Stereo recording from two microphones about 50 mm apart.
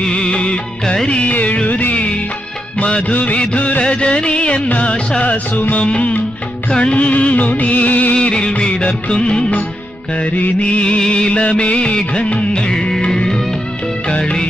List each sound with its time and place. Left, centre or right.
0.1 s music of bollywood: centre
2.8 s music of bollywood: left
5.6 s music: left
5.9 s music of bollywood: left
8.1 s music of bollywood: centre
12.7 s music: centre